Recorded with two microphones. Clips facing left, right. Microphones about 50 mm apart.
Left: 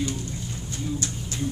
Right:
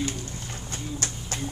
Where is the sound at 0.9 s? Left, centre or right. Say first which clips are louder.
Left 2 dB; right.